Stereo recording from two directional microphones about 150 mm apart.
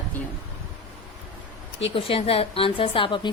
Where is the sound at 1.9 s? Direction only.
40° left (ahead or behind).